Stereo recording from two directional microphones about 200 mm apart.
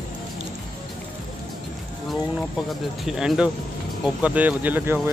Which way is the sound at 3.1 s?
5° right (ahead or behind).